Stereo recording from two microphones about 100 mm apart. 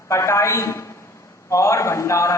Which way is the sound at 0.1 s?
30° left (ahead or behind).